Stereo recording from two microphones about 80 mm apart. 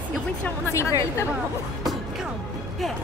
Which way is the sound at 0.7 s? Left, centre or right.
Left.